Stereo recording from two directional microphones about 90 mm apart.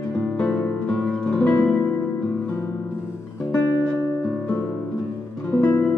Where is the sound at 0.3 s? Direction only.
15° left (ahead or behind).